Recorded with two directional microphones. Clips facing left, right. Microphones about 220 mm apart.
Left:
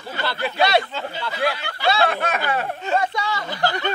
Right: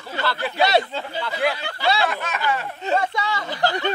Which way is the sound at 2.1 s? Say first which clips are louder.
Left 2 dB; 55° left (ahead or behind).